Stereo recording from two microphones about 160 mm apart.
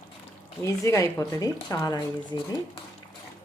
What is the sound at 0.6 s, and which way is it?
Speech, 20° left (ahead or behind).